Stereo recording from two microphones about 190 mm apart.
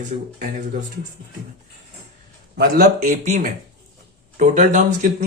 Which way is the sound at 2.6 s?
50° right (ahead or behind).